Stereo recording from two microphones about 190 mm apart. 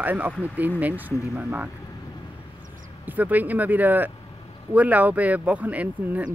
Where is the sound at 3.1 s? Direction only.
10° right (ahead or behind).